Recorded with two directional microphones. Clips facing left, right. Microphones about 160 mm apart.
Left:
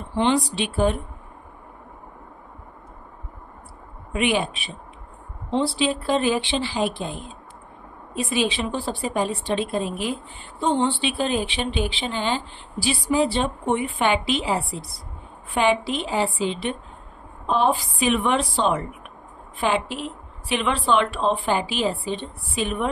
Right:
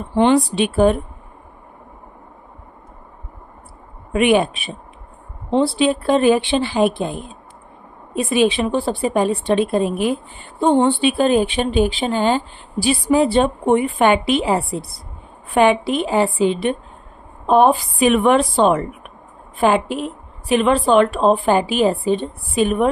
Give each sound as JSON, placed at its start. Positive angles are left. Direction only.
{"t": 0.1, "sound": "a woman's voice", "side_deg": -55}
{"t": 4.1, "sound": "a woman's voice", "side_deg": -55}